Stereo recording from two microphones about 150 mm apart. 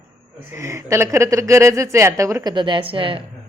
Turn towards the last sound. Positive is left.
turn(degrees=-35)  # may be behind; listen again after turning